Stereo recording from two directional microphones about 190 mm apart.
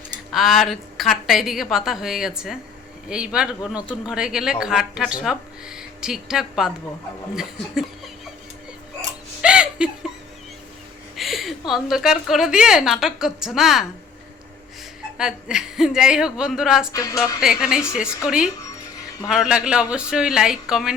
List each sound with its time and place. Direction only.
0.3 s speech: centre (ahead or behind)
9.4 s laughter: 5° right (ahead or behind)
11.1 s speech: centre (ahead or behind)
15.2 s speech: 5° right (ahead or behind)
16.9 s speech: 15° left (ahead or behind)
17.4 s speech: 5° right (ahead or behind)
19.3 s speech: 5° right (ahead or behind)